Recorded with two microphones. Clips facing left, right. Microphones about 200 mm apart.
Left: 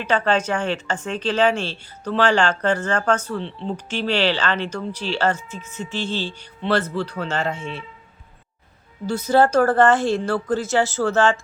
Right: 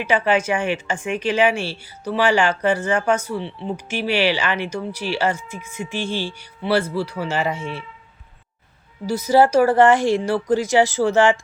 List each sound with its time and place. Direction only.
0.0 s speech: 10° right (ahead or behind)
9.0 s speech: 10° right (ahead or behind)